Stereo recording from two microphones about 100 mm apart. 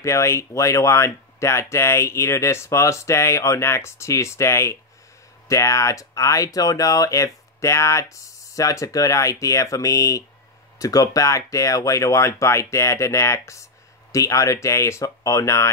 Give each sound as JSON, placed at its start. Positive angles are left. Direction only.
{"t": 0.0, "sound": "speech", "side_deg": 30}